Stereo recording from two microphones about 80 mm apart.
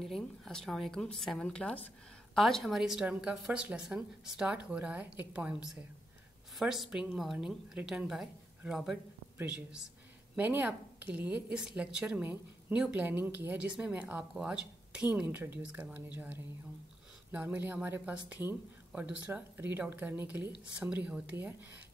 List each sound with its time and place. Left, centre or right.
0.0 s speech: centre
2.3 s a woman's voice: centre; by 13.6 s right
13.7 s speech: centre
15.2 s a woman's voice: right